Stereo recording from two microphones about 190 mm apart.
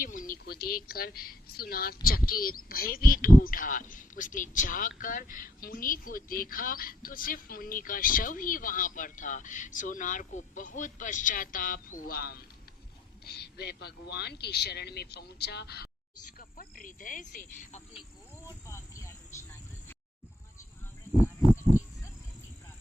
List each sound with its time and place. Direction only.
0.0 s a woman's voice: 45° left (ahead or behind)
18.4 s cricket: 15° left (ahead or behind)